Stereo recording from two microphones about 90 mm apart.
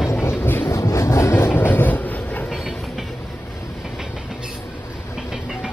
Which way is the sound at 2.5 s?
Centre (ahead or behind).